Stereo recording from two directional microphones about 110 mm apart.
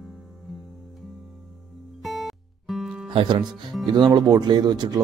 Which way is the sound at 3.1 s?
45° right (ahead or behind).